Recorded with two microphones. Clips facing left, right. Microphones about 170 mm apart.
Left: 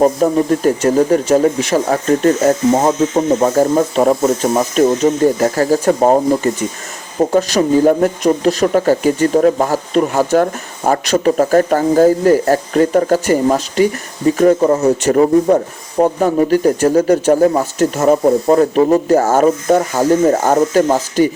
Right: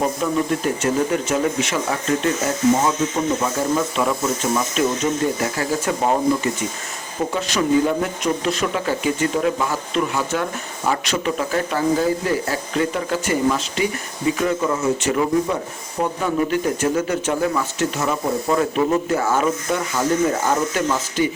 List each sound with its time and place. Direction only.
0.0 s speech: 40° left (ahead or behind)